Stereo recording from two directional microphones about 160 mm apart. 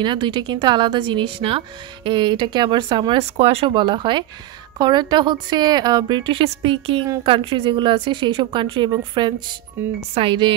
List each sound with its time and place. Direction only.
0.0 s speech: 30° right (ahead or behind)
9.8 s speech: 15° right (ahead or behind)
10.1 s speech: 30° right (ahead or behind)